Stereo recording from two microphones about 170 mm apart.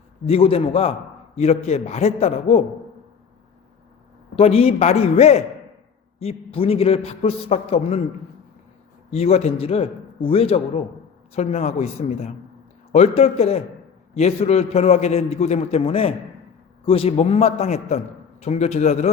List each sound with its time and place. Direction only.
0.3 s a man's voice: 35° left (ahead or behind)
4.4 s a man's voice: 35° left (ahead or behind)
9.0 s a man's voice: 35° left (ahead or behind)